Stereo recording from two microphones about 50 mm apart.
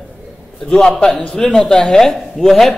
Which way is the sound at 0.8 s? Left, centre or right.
Centre.